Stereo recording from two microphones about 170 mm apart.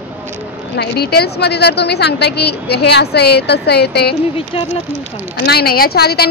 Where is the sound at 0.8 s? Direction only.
70° left (ahead or behind).